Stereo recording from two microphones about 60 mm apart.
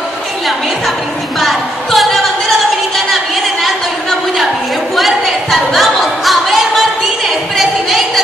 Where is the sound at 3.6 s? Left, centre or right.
Centre.